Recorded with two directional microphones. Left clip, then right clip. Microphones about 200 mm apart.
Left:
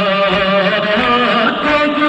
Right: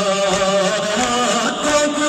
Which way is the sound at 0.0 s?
65° right (ahead or behind).